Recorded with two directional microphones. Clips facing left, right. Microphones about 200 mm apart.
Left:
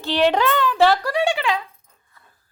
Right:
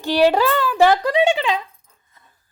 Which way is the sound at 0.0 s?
10° right (ahead or behind).